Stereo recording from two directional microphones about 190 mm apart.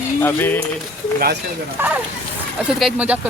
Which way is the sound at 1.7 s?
10° right (ahead or behind).